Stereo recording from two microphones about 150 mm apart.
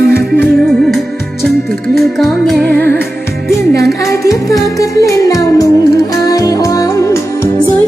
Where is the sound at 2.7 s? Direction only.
15° left (ahead or behind).